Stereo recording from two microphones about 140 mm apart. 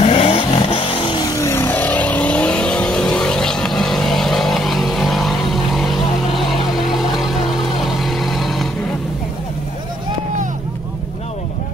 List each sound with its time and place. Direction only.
0.0 s vehicle: 45° left (ahead or behind); by 8.6 s centre (ahead or behind)